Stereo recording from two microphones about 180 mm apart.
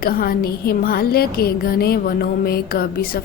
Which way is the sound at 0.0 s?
55° left (ahead or behind).